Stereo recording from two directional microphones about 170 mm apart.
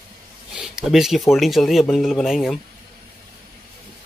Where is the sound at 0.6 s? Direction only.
5° right (ahead or behind).